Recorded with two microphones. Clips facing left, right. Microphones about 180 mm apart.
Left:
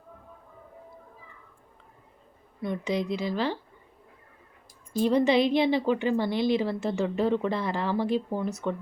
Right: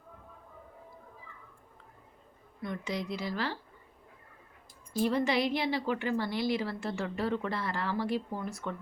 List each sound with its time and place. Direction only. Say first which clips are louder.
2.6 s a woman's voice: left 7 dB; 20° left (ahead or behind)
4.9 s a woman's voice: left 6 dB; 20° left (ahead or behind)